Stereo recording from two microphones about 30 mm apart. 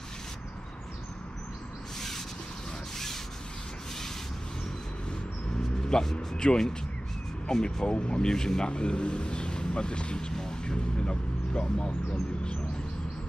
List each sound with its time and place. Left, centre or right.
2.0 s a sound: centre
5.6 s a sound: left
6.1 s speech: left
7.4 s speech: left
7.8 s speech: left
8.6 s speech: left